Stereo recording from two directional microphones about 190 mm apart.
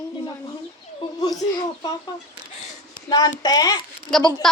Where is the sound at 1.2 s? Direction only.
20° left (ahead or behind).